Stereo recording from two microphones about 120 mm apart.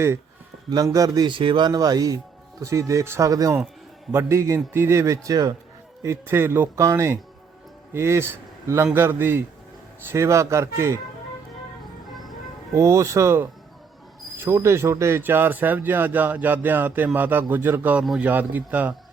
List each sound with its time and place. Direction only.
0.9 s a man's voice: 30° right (ahead or behind)
12.7 s a man's voice: 25° right (ahead or behind)